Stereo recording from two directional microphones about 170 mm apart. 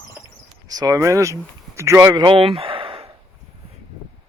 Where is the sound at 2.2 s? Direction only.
30° right (ahead or behind).